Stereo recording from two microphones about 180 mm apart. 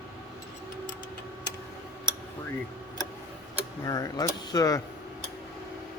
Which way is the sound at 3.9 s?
20° left (ahead or behind).